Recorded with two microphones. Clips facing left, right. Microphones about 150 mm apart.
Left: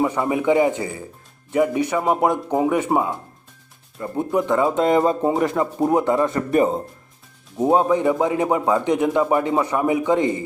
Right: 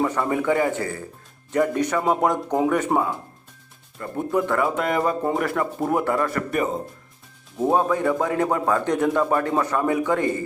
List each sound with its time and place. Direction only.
0.0 s speech: 15° left (ahead or behind)